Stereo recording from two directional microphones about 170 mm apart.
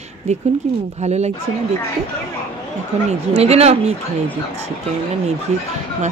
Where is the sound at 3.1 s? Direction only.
40° right (ahead or behind).